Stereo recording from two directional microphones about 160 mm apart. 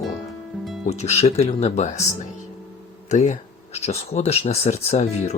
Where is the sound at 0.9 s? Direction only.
45° left (ahead or behind).